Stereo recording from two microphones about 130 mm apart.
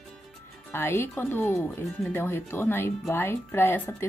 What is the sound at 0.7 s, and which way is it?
Speech, 20° left (ahead or behind).